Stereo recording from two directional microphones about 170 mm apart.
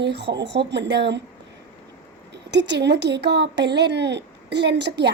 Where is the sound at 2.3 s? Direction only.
90° right.